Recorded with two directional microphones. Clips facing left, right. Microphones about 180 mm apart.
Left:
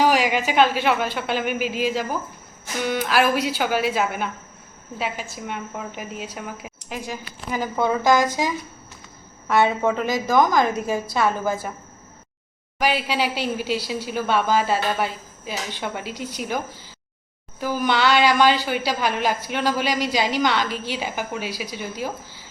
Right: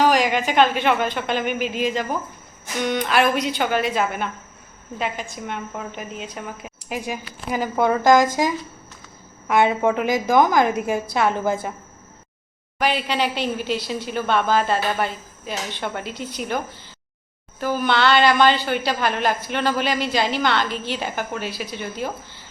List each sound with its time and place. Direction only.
0.0 s a woman's voice: 10° left (ahead or behind)
6.8 s a woman's voice: 15° right (ahead or behind)
8.0 s speech: 50° right (ahead or behind)
9.5 s a woman's voice: 15° right (ahead or behind)
12.8 s a woman's voice: 10° left (ahead or behind)